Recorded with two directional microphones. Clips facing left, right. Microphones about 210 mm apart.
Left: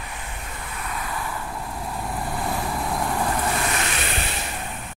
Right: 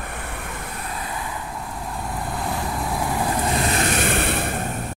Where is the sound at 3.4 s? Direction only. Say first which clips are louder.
Right 3 dB; 30° right (ahead or behind).